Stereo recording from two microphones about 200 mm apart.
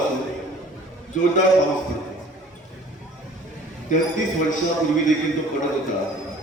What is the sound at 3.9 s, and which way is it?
Speech, 40° left (ahead or behind).